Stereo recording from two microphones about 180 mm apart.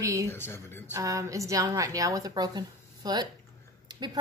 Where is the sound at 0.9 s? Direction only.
20° right (ahead or behind).